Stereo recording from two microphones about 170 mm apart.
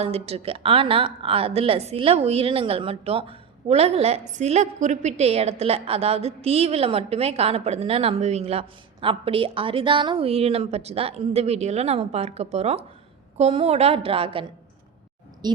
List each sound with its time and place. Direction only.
0.0 s a woman's voice: 35° right (ahead or behind)